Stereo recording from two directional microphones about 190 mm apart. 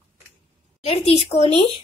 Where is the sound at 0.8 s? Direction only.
35° left (ahead or behind).